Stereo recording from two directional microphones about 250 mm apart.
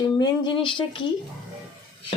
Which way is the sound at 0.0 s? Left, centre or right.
Centre.